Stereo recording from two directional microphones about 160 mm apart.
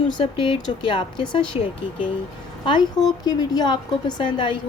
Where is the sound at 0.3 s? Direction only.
30° left (ahead or behind).